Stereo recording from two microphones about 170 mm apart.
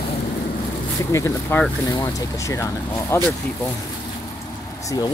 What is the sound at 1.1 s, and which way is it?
Speech, 15° left (ahead or behind).